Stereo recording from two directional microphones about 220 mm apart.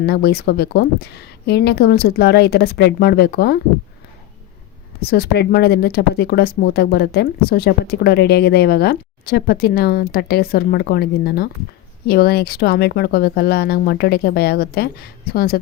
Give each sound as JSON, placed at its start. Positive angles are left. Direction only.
{"t": 0.0, "sound": "speech", "side_deg": 45}
{"t": 4.9, "sound": "speech", "side_deg": 45}